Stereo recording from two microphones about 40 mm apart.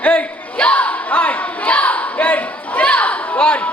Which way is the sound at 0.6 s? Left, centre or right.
Left.